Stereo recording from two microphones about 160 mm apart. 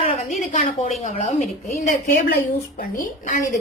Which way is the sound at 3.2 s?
55° left (ahead or behind).